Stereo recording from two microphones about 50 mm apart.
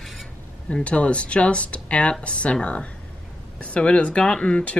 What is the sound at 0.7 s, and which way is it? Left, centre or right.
Speech, left.